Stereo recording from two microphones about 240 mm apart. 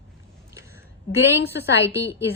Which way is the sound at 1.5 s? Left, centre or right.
Centre.